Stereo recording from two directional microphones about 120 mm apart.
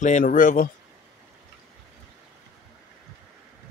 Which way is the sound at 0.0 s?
85° left.